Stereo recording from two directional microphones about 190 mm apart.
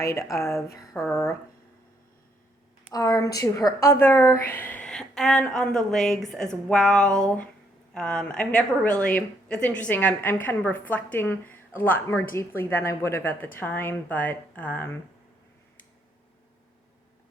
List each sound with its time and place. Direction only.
0.0 s a woman's voice: 15° left (ahead or behind)
2.9 s a woman's voice: 20° left (ahead or behind)